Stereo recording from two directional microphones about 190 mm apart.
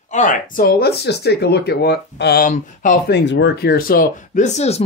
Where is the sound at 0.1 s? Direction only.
45° left (ahead or behind).